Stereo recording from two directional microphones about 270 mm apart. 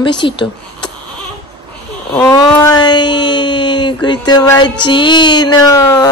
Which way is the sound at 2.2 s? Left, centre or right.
Centre.